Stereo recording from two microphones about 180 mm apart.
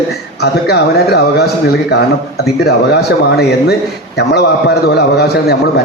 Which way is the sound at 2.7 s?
65° left (ahead or behind).